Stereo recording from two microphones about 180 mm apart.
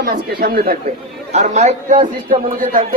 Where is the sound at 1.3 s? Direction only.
40° right (ahead or behind).